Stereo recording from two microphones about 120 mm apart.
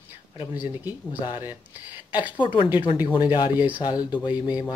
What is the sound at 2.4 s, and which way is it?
Speech, 45° left (ahead or behind).